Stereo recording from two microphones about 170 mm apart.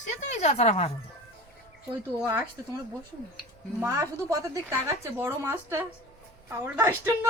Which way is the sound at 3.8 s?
20° right (ahead or behind).